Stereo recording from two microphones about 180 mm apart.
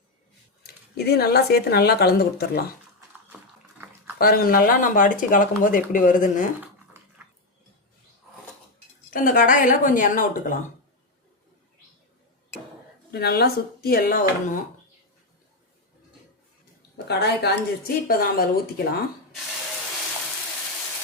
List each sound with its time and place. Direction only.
0.6 s speech: 60° left (ahead or behind)
4.2 s speech: 55° left (ahead or behind)
9.0 s speech: 50° left (ahead or behind)
13.1 s speech: 60° left (ahead or behind)
17.1 s speech: 65° left (ahead or behind)